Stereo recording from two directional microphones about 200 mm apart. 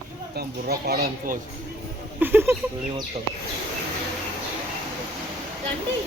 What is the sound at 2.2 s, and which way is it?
Speech, 10° right (ahead or behind).